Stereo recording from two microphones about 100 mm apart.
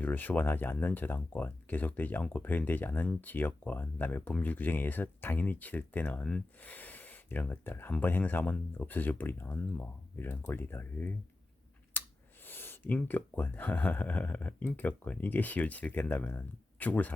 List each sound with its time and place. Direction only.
0.0 s speech: 20° left (ahead or behind)
11.9 s a sound: 20° left (ahead or behind)
12.5 s speech: 20° left (ahead or behind)